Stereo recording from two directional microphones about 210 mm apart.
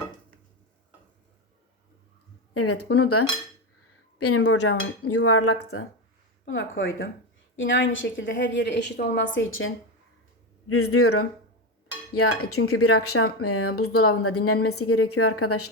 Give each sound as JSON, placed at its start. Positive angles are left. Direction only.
{"t": 2.5, "sound": "speech", "side_deg": 90}
{"t": 6.4, "sound": "a woman's voice", "side_deg": 60}
{"t": 9.3, "sound": "a woman's voice", "side_deg": 70}
{"t": 10.7, "sound": "speech", "side_deg": 90}